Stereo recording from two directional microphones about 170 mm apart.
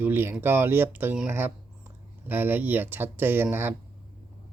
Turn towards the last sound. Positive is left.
turn(degrees=-15)  # may be behind; listen again after turning